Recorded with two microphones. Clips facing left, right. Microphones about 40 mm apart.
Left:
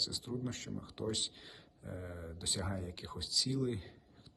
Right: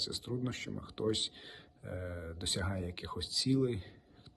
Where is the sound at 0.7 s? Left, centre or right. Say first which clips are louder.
Right 6 dB; right.